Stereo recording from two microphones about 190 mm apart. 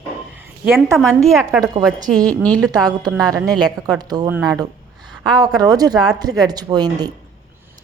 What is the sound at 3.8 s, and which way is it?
Speech, 20° right (ahead or behind).